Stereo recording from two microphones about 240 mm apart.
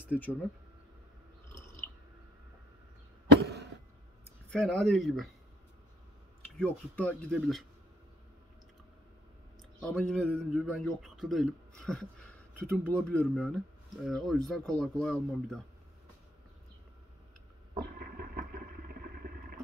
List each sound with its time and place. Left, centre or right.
0.0 s speech: centre
4.5 s a man's voice: centre
6.6 s a man's voice: centre
9.8 s a man's voice: centre
17.8 s vehicle: right